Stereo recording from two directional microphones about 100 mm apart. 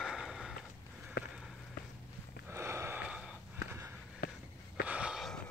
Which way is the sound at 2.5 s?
25° right (ahead or behind).